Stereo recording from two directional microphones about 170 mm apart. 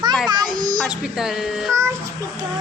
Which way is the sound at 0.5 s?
50° right (ahead or behind).